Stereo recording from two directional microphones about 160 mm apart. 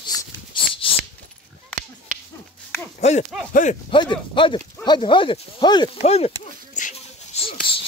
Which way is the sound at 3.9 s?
30° left (ahead or behind).